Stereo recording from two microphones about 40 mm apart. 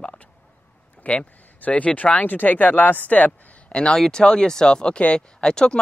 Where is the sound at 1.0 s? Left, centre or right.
Left.